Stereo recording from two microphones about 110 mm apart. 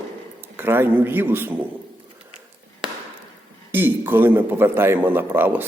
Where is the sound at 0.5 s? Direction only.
20° right (ahead or behind).